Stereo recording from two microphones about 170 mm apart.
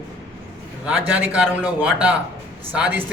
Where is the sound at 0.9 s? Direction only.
10° right (ahead or behind).